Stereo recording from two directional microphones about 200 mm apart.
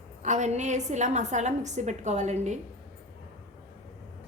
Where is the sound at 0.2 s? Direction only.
35° right (ahead or behind).